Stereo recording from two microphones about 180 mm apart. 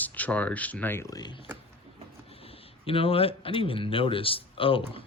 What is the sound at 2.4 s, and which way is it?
Speech, 30° left (ahead or behind).